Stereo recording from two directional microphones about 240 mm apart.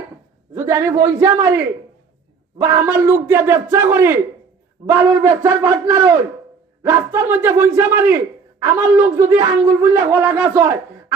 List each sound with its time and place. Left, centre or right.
0.5 s speech: centre